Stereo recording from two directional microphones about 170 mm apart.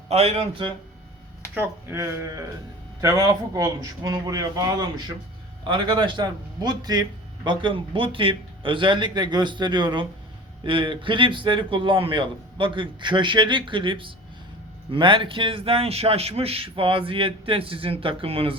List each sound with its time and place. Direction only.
0.1 s a man's voice: 35° right (ahead or behind)
1.5 s a man's voice: 15° right (ahead or behind); by 18.5 s 35° right (ahead or behind)